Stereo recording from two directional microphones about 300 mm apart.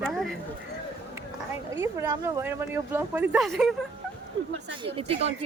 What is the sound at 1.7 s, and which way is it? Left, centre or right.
Speech, centre.